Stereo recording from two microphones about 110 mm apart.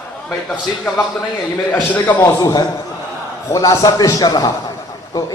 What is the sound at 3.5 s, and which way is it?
Speech, 30° left (ahead or behind).